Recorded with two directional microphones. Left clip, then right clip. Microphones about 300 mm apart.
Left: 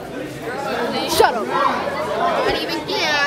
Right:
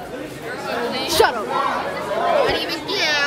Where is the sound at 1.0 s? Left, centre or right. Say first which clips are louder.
Left 1 dB; centre.